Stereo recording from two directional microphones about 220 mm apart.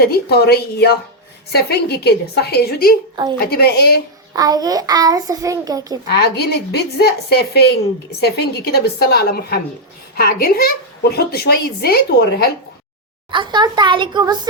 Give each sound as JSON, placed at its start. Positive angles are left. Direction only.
{"t": 0.0, "sound": "a woman's voice", "side_deg": 45}
{"t": 4.4, "sound": "a child's voice", "side_deg": -15}
{"t": 6.1, "sound": "a woman's voice", "side_deg": 45}
{"t": 13.3, "sound": "a child's voice", "side_deg": -20}